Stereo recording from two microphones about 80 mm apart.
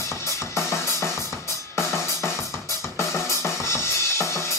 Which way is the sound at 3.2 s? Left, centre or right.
Left.